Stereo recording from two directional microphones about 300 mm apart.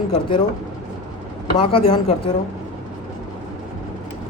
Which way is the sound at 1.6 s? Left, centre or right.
Centre.